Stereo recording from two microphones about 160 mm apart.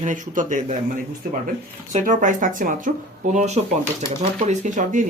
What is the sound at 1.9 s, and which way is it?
Speech, 50° right (ahead or behind).